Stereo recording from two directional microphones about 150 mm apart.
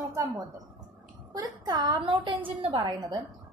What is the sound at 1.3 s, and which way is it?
A woman's voice, 25° right (ahead or behind).